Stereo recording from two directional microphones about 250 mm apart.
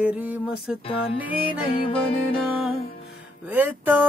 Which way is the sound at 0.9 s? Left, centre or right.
Left.